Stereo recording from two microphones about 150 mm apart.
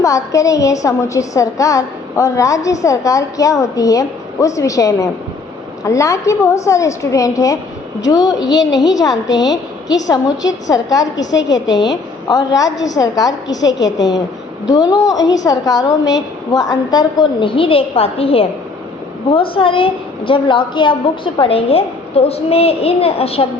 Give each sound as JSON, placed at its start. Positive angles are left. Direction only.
{"t": 0.0, "sound": "a woman's voice", "side_deg": 20}
{"t": 12.3, "sound": "a woman's voice", "side_deg": 25}